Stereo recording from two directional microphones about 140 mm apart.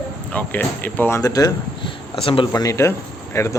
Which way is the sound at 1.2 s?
25° left (ahead or behind).